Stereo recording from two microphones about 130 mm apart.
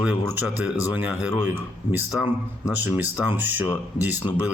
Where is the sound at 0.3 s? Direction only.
10° right (ahead or behind).